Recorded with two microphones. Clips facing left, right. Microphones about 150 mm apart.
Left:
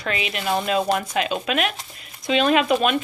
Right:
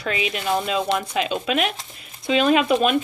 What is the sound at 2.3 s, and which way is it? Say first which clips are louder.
Speech: right 1 dB; 30° right (ahead or behind).